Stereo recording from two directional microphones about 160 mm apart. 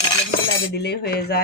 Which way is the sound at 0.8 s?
90° left.